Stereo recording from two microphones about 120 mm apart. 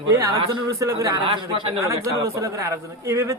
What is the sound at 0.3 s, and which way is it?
Speech, 30° right (ahead or behind).